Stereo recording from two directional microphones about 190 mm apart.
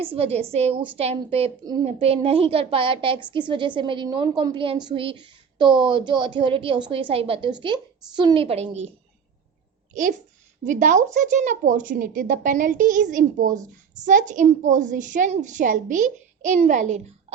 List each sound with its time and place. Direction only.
0.0 s a woman's voice: 30° right (ahead or behind)
9.9 s a woman's voice: 45° right (ahead or behind)